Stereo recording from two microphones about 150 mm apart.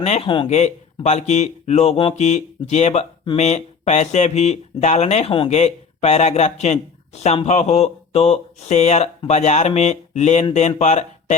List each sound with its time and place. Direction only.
0.0 s speech: 40° left (ahead or behind)
0.4 s speech: 50° left (ahead or behind)